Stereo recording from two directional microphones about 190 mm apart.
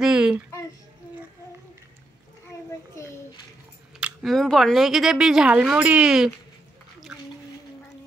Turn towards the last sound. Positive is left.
turn(degrees=-5)  # may be behind; listen again after turning